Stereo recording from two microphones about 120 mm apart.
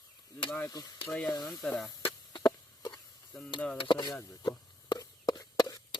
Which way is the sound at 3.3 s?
5° left (ahead or behind).